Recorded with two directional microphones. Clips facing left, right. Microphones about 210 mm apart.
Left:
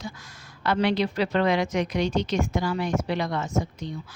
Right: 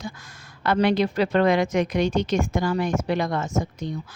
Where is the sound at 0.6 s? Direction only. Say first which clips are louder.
Right 3 dB; 50° right (ahead or behind).